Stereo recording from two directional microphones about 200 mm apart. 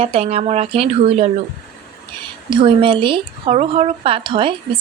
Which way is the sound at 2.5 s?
25° right (ahead or behind).